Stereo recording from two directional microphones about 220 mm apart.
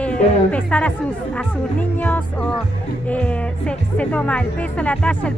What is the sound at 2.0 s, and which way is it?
Speech, 5° left (ahead or behind).